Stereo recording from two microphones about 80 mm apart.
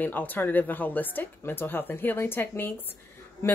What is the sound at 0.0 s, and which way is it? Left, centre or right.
Speech, left.